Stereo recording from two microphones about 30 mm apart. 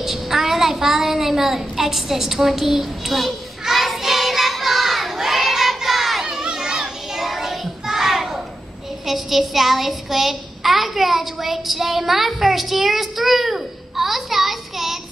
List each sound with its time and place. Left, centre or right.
0.0 s child singing: centre
5.1 s crowd: centre
5.9 s child singing: centre
6.4 s children playing: right
7.2 s child singing: centre
7.8 s a sound: centre
9.0 s child singing: centre
12.1 s a sound: centre